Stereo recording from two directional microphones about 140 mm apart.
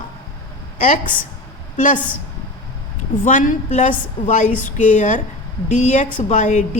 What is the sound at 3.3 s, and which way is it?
A woman's voice, 65° left (ahead or behind).